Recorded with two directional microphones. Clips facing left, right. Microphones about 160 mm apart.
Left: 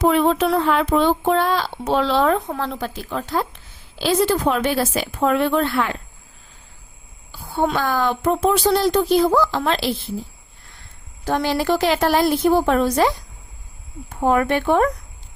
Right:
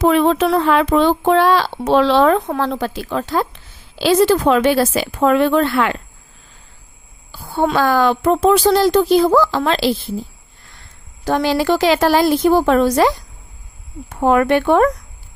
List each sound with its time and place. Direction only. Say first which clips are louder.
0.0 s speech: right 3 dB; 90° right
7.5 s speech: right 5 dB; 90° right
11.3 s speech: right 4 dB; 90° right; by 14.8 s 70° right (ahead or behind)